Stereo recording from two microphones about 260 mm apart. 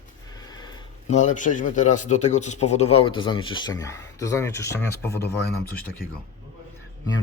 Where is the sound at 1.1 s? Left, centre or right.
Left; by 4.9 s centre.